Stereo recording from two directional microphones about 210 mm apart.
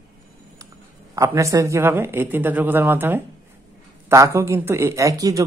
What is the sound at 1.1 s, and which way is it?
A woman's voice, 15° right (ahead or behind).